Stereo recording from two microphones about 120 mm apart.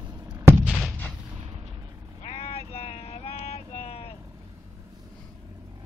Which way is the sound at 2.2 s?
55° left (ahead or behind).